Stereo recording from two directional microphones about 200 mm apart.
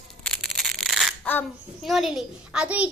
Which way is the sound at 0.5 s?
Centre (ahead or behind).